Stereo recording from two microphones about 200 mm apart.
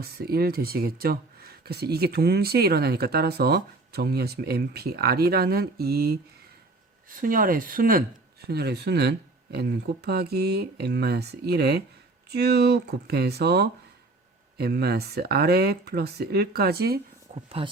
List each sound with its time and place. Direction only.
0.0 s speech: 50° right (ahead or behind)
17.3 s speech: 35° right (ahead or behind)